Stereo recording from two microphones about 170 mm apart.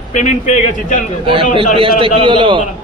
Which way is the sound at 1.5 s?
30° right (ahead or behind).